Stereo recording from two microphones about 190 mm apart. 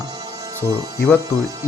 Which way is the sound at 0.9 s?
15° left (ahead or behind).